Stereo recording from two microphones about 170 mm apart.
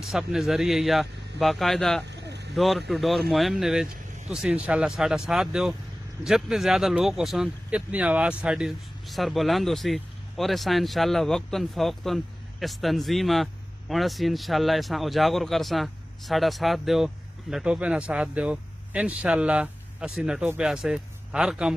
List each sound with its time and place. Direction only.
0.0 s speech: centre (ahead or behind)
2.0 s bird: 85° right
2.5 s speech: centre (ahead or behind)